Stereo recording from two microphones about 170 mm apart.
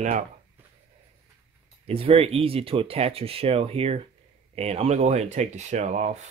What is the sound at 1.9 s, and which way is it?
Speech, 35° right (ahead or behind).